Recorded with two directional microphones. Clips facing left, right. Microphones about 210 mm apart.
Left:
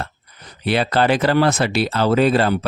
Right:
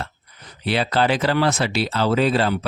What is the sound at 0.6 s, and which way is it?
Speech, 50° left (ahead or behind).